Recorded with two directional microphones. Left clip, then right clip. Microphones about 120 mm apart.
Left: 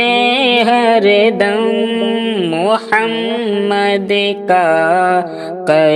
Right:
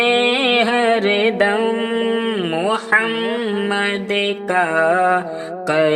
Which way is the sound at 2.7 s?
25° left (ahead or behind).